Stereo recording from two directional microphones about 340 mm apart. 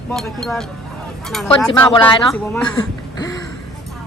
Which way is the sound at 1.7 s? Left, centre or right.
Centre.